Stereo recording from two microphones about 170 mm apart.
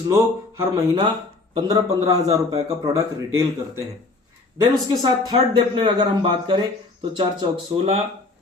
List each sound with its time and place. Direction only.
0.1 s a man's voice: 15° right (ahead or behind)
4.6 s a man's voice: 25° right (ahead or behind)